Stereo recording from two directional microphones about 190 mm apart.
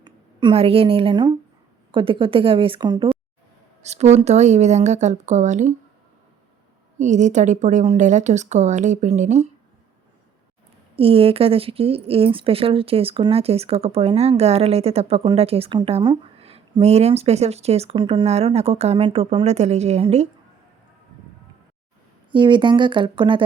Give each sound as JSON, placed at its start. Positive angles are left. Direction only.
{"t": 0.0, "sound": "a woman's voice", "side_deg": -25}
{"t": 3.8, "sound": "speech", "side_deg": -35}
{"t": 7.0, "sound": "speech", "side_deg": -40}
{"t": 10.9, "sound": "speech", "side_deg": -30}
{"t": 22.3, "sound": "a woman's voice", "side_deg": -25}